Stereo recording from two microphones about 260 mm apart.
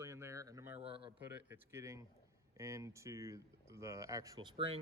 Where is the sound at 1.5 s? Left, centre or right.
Centre.